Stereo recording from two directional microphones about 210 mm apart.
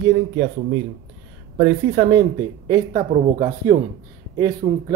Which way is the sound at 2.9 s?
35° right (ahead or behind).